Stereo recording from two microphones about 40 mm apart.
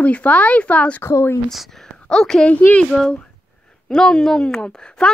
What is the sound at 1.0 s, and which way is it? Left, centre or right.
Speech, left.